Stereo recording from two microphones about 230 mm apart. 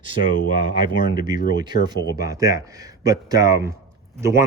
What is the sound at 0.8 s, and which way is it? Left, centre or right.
Speech, centre.